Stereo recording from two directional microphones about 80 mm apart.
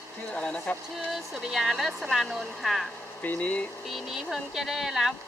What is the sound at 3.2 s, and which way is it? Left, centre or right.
Speech, centre.